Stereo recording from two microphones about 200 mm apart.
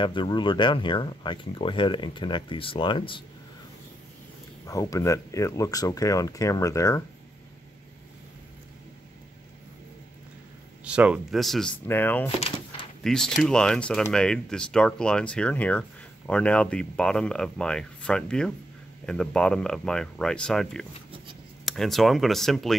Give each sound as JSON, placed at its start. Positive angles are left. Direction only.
{"t": 0.0, "sound": "speech", "side_deg": 25}
{"t": 4.6, "sound": "speech", "side_deg": 15}
{"t": 10.8, "sound": "speech", "side_deg": -5}
{"t": 12.4, "sound": "door", "side_deg": 30}
{"t": 13.0, "sound": "speech", "side_deg": 0}